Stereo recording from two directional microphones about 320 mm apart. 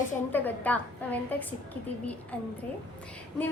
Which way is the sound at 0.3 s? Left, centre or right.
Centre.